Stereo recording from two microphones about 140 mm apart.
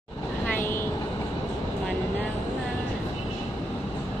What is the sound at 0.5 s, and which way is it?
Vehicle, 15° left (ahead or behind).